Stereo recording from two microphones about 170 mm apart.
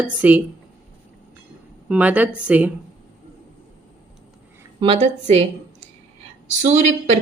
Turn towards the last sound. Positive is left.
turn(degrees=-40)  # may be behind; listen again after turning